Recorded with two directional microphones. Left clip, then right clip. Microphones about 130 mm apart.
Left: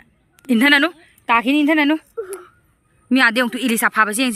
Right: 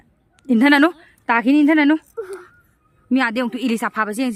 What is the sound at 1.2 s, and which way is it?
Speech, 30° right (ahead or behind).